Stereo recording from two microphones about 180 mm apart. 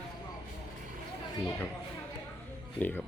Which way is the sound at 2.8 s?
5° left (ahead or behind).